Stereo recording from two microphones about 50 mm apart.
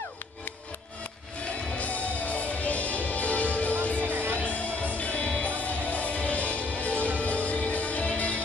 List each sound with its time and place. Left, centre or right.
1.8 s music: left
4.0 s music: right
4.4 s music: left